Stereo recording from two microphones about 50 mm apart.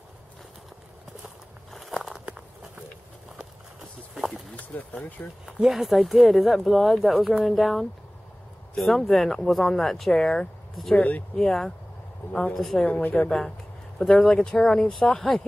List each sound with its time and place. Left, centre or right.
1.7 s a sound: centre
4.1 s a sound: centre
4.6 s speech: left
5.4 s speech: centre
11.0 s speech: left
11.3 s speech: centre
12.2 s speech: left
12.5 s speech: centre
12.8 s a woman's voice: left
13.9 s speech: centre